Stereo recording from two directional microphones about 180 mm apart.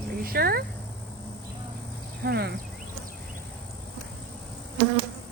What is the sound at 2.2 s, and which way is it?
Speech, 65° right (ahead or behind).